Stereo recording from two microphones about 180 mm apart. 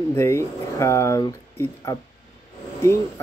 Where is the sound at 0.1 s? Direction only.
15° left (ahead or behind).